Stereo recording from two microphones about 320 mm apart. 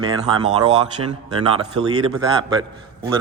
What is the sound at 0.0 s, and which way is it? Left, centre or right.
Speech, centre.